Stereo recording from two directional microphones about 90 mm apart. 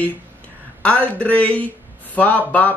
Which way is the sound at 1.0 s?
15° left (ahead or behind).